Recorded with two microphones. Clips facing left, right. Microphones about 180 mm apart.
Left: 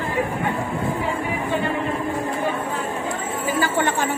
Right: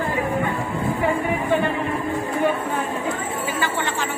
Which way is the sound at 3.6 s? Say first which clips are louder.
Left 6 dB; 50° left (ahead or behind).